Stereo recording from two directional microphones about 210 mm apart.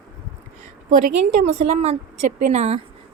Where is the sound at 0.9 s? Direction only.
35° right (ahead or behind).